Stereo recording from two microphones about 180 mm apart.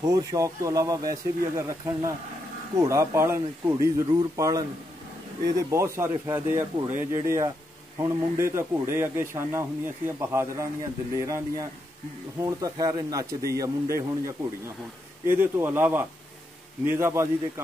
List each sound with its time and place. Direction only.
0.0 s speech: 20° right (ahead or behind)